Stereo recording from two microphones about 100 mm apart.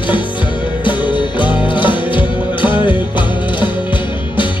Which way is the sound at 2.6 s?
15° right (ahead or behind).